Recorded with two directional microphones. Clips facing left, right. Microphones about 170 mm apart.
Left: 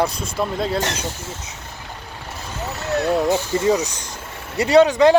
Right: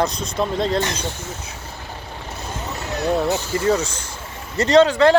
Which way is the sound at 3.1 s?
15° left (ahead or behind).